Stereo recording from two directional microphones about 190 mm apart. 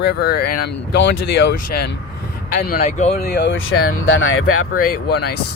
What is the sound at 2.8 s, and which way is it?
Speech, 35° left (ahead or behind).